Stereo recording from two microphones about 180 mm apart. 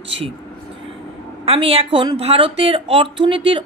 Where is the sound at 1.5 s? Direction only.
30° right (ahead or behind).